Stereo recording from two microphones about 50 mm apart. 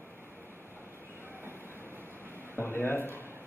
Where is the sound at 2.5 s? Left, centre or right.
Left.